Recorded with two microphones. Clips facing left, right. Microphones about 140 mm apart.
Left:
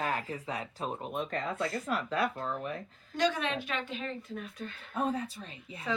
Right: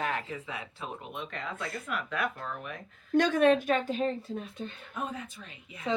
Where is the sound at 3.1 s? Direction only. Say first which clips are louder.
Right 8 dB; 50° right (ahead or behind); by 4.7 s 25° right (ahead or behind).